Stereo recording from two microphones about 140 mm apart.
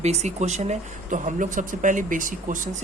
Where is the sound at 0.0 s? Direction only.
55° right (ahead or behind).